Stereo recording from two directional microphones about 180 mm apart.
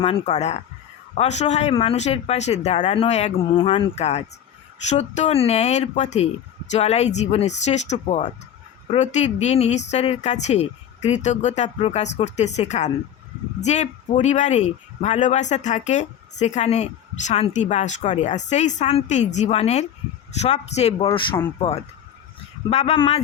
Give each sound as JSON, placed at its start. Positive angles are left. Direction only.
{"t": 0.0, "sound": "speech", "side_deg": 35}